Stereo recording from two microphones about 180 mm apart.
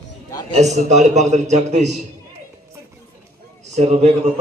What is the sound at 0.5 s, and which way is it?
A man's voice, 40° right (ahead or behind).